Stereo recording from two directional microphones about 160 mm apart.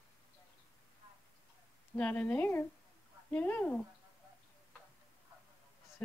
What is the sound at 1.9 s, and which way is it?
Speech, 10° left (ahead or behind).